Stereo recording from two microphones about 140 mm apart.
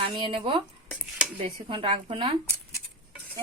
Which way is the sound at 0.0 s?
35° right (ahead or behind).